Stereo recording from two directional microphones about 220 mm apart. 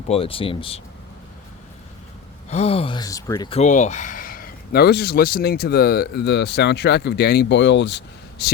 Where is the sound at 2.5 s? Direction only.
30° left (ahead or behind).